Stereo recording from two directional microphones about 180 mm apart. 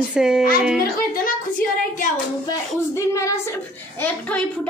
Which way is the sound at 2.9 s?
15° left (ahead or behind).